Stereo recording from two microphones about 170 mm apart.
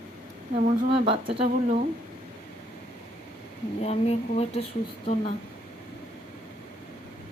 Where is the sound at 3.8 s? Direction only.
40° left (ahead or behind).